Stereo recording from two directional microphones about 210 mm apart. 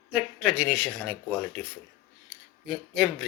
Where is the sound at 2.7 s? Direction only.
Centre (ahead or behind).